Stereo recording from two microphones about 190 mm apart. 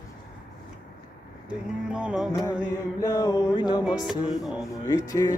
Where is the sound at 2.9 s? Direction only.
20° left (ahead or behind).